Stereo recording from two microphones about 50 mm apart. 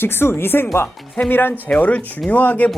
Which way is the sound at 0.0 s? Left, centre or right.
Left.